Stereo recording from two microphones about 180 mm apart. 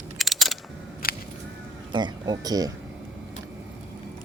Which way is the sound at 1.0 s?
55° left (ahead or behind).